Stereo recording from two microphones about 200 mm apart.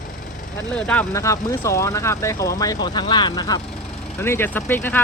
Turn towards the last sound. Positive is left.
turn(degrees=10)  # may be behind; listen again after turning